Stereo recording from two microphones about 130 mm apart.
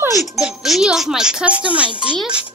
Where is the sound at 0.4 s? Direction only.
5° right (ahead or behind).